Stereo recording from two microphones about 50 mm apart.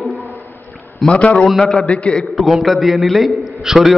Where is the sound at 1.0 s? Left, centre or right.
Left.